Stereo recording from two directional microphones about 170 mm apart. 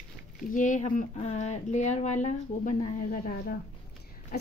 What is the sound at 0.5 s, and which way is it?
A woman's voice, 50° left (ahead or behind).